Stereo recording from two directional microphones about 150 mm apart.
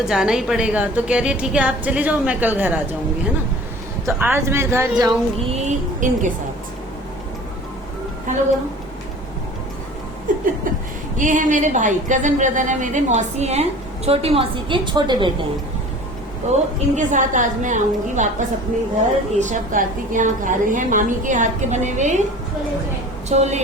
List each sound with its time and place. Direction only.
0.0 s a woman's voice: 5° right (ahead or behind)
4.0 s a woman's voice: 15° right (ahead or behind)
5.5 s speech: 50° right (ahead or behind)
10.3 s laughter: 60° right (ahead or behind)
11.2 s a woman's voice: 60° right (ahead or behind); by 15.4 s 30° right (ahead or behind)
16.5 s a woman's voice: 55° right (ahead or behind)
23.3 s a woman's voice: 45° right (ahead or behind)